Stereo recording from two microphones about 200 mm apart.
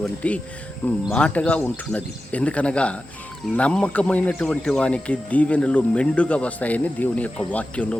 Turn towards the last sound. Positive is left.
turn(degrees=5)  # may be behind; listen again after turning